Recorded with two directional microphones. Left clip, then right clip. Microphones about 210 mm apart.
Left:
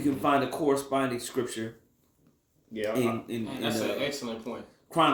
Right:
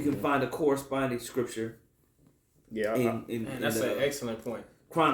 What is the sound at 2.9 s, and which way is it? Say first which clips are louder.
Speech: left 2 dB; 15° left (ahead or behind).